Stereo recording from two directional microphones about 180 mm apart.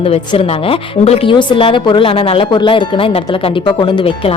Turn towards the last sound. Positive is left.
turn(degrees=30)  # may be behind; listen again after turning